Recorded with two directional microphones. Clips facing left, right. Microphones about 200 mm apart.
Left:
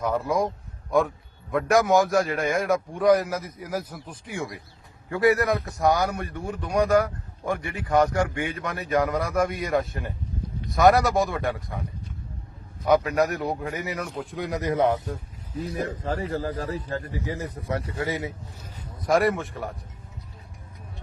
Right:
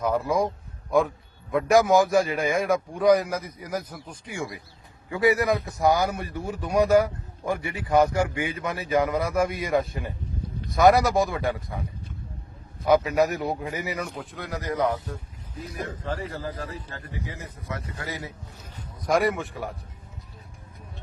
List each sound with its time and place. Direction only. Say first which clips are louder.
0.0 s a man's voice: right 1 dB; centre (ahead or behind)
14.3 s speech: left 4 dB; 20° left (ahead or behind)
15.5 s a man's voice: left 5 dB; 35° left (ahead or behind)
17.9 s speech: left 7 dB; 20° left (ahead or behind)
19.0 s a man's voice: left 1 dB; centre (ahead or behind)